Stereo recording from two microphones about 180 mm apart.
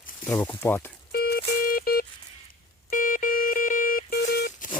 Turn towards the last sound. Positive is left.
turn(degrees=45)  # may be behind; listen again after turning